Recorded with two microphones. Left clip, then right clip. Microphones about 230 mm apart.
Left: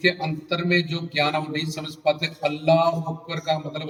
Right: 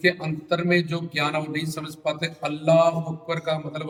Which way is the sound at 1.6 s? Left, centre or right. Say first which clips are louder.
Left 1 dB; right.